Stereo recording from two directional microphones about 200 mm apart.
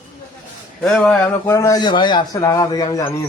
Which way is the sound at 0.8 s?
5° left (ahead or behind).